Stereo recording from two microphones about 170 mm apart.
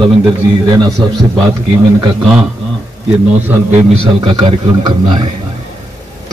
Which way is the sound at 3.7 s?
35° right (ahead or behind).